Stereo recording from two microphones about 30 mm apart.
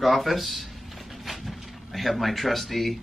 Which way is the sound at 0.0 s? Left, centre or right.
Centre.